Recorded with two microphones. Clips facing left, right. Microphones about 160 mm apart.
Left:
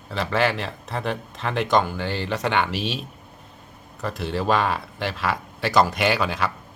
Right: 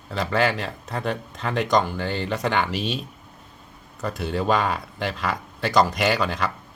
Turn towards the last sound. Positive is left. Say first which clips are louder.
# even
turn(degrees=5)  # may be behind; listen again after turning